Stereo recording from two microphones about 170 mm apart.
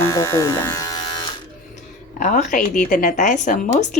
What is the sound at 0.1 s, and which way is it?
Speech, 15° left (ahead or behind).